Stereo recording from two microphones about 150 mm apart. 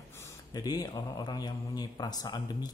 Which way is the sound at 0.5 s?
25° left (ahead or behind).